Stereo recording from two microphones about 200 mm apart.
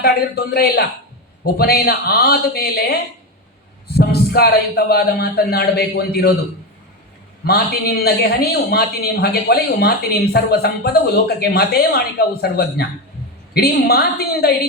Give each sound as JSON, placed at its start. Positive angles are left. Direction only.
{"t": 0.0, "sound": "a man's voice", "side_deg": 50}
{"t": 7.4, "sound": "a man's voice", "side_deg": 50}